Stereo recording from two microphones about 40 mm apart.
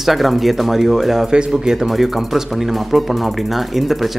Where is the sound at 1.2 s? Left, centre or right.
Centre.